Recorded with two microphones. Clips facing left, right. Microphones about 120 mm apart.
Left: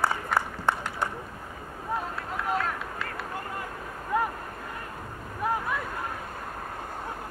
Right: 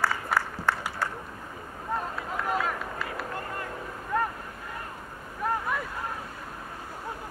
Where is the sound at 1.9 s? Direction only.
Centre (ahead or behind).